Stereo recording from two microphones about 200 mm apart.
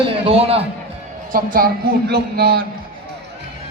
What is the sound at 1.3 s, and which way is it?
A man's voice, 45° right (ahead or behind).